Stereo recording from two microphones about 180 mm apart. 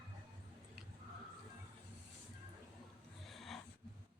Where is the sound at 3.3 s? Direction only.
Centre (ahead or behind).